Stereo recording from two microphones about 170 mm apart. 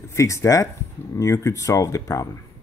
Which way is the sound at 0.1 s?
15° left (ahead or behind).